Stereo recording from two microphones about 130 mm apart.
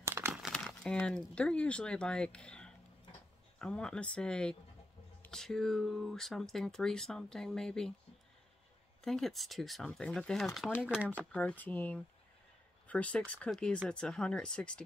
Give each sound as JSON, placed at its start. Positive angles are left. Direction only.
{"t": 0.0, "sound": "crumpling", "side_deg": -20}
{"t": 0.3, "sound": "crumpling", "side_deg": 0}
{"t": 0.7, "sound": "speech", "side_deg": 10}
{"t": 9.0, "sound": "speech", "side_deg": 0}
{"t": 11.3, "sound": "speech", "side_deg": 10}